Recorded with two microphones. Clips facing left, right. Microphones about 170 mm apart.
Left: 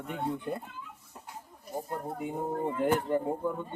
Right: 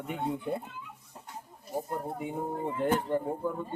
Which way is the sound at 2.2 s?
Centre (ahead or behind).